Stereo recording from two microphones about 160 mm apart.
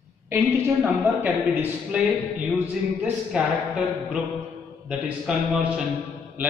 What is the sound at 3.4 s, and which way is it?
Speech, 5° right (ahead or behind).